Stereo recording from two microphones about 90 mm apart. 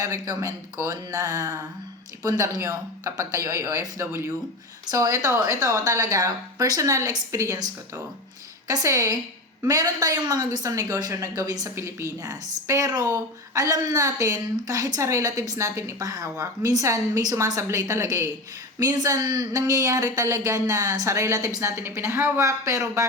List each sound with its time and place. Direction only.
0.0 s a woman's voice: 40° right (ahead or behind)
11.7 s a woman's voice: 30° right (ahead or behind)